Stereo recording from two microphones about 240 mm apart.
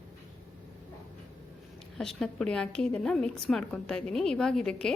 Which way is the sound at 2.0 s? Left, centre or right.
Centre.